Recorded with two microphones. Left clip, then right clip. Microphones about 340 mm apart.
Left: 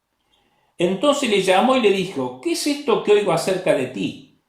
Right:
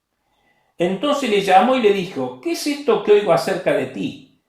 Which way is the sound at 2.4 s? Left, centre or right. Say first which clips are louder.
Left 1 dB; centre.